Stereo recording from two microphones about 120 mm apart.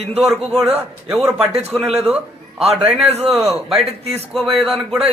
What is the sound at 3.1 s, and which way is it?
Speech, 60° right (ahead or behind).